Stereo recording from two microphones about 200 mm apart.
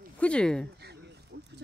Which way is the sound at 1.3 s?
55° right (ahead or behind).